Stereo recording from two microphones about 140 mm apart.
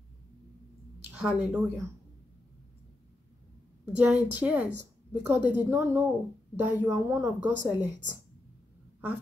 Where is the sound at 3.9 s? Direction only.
10° right (ahead or behind).